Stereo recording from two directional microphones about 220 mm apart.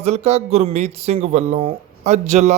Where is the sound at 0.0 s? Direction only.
30° right (ahead or behind).